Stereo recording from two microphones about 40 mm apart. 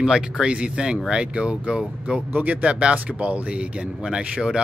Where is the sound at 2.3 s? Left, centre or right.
Right.